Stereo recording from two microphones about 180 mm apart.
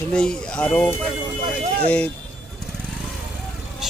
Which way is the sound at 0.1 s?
5° left (ahead or behind).